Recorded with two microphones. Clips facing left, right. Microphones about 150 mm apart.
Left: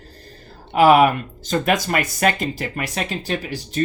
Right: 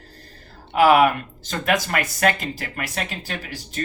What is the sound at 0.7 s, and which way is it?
Speech, 20° left (ahead or behind).